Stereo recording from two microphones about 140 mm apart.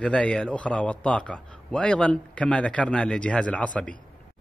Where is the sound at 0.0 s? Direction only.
5° left (ahead or behind).